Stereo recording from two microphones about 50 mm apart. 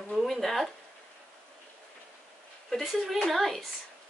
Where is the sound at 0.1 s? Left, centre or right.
Centre.